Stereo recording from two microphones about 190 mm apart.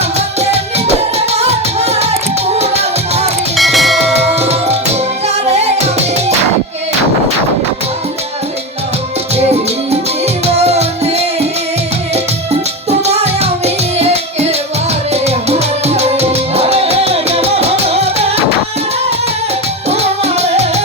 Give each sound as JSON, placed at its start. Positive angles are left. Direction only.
{"t": 0.9, "sound": "music", "side_deg": -35}
{"t": 3.6, "sound": "music", "side_deg": 0}
{"t": 4.4, "sound": "music", "side_deg": -35}
{"t": 10.4, "sound": "music", "side_deg": -35}
{"t": 13.1, "sound": "music", "side_deg": -35}
{"t": 19.9, "sound": "music", "side_deg": -35}